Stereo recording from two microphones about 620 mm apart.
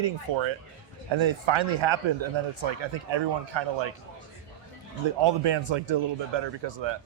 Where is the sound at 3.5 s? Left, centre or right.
Right.